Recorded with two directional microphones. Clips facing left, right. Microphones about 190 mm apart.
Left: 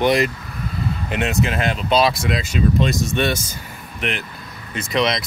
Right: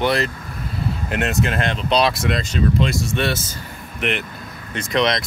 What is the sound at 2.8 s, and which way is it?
Speech, 20° left (ahead or behind).